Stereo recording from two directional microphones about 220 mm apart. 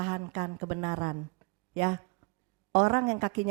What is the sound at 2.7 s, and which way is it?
Speech, 20° right (ahead or behind).